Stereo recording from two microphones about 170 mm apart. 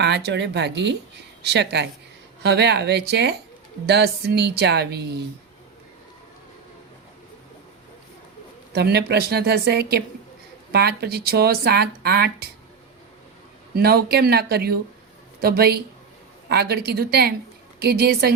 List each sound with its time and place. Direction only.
0.0 s speech: 85° right
2.4 s speech: 80° right
8.7 s speech: 70° right (ahead or behind)
13.7 s speech: 70° right (ahead or behind)